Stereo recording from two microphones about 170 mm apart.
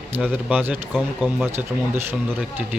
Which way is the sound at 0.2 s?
5° right (ahead or behind).